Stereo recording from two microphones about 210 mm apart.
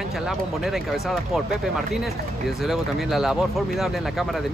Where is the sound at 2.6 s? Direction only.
Centre (ahead or behind).